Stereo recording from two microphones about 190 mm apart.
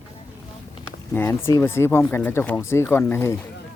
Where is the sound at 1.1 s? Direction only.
10° left (ahead or behind).